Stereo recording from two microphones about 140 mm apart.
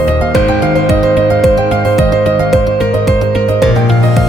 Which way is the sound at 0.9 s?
Centre (ahead or behind).